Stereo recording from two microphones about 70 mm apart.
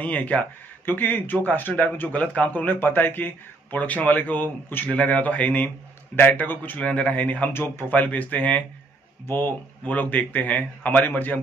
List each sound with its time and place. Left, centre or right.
0.0 s speech: left
7.5 s speech: left
7.9 s speech: left